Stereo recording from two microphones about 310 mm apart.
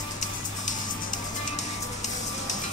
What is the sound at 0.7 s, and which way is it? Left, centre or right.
Music, left.